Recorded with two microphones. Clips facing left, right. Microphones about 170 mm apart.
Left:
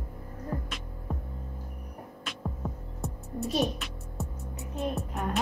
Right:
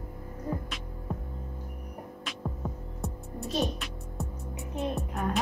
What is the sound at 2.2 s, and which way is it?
Music, centre (ahead or behind).